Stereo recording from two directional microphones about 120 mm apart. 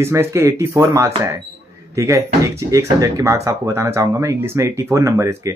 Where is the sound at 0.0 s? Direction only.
20° right (ahead or behind).